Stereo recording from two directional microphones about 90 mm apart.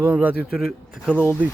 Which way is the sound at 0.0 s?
20° right (ahead or behind).